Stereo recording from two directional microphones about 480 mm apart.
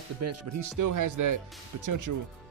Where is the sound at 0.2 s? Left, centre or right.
Right.